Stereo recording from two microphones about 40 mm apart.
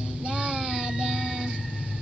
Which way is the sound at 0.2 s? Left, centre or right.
Right.